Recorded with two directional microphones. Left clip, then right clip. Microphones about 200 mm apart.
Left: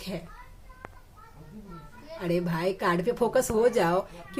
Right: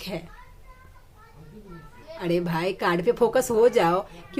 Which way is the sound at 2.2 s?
20° right (ahead or behind).